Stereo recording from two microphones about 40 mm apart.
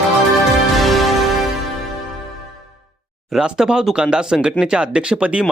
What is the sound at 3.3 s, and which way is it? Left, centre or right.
Speech, centre.